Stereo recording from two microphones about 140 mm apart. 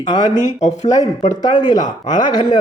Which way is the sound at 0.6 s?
55° left (ahead or behind).